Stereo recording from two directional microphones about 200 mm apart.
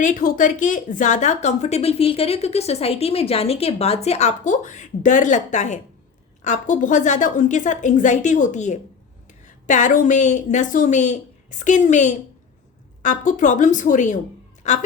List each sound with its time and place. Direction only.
0.0 s a woman's voice: 40° left (ahead or behind)